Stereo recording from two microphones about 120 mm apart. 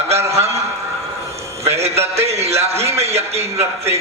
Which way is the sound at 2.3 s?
60° right (ahead or behind).